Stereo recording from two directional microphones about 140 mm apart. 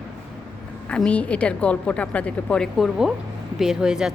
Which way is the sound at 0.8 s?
10° left (ahead or behind).